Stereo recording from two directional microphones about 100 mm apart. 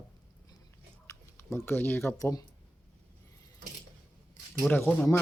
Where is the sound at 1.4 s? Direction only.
25° left (ahead or behind).